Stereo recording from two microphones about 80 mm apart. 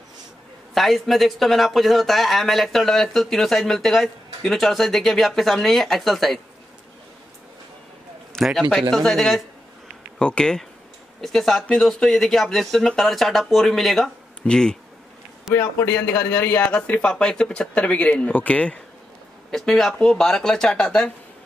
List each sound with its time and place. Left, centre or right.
0.7 s a man's voice: centre
8.4 s a man's voice: centre
15.5 s a man's voice: centre
15.9 s a man's voice: left
19.5 s a man's voice: centre